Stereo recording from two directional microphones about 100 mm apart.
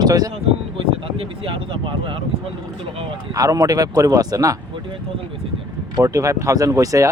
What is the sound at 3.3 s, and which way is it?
Speech, 35° right (ahead or behind).